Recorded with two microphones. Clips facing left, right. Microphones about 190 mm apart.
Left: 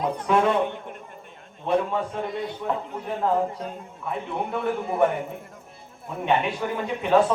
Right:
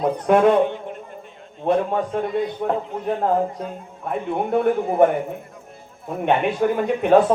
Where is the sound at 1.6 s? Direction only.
55° right (ahead or behind).